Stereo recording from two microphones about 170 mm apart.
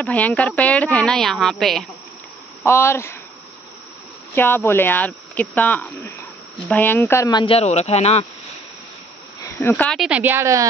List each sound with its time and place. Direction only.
0.0 s speech: 10° left (ahead or behind)
2.6 s speech: 15° left (ahead or behind)
4.4 s speech: 10° left (ahead or behind); by 8.3 s 40° left (ahead or behind)
9.6 s speech: 10° left (ahead or behind)
9.9 s speech: 5° right (ahead or behind)